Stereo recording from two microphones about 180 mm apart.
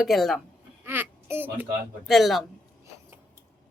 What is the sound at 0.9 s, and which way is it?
Speech, 10° right (ahead or behind).